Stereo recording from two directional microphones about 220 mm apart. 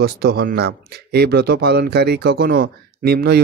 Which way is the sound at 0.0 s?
45° right (ahead or behind).